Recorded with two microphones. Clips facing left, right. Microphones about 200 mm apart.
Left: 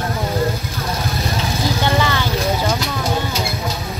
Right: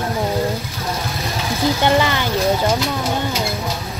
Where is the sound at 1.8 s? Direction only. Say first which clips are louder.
Right 2 dB; 15° right (ahead or behind).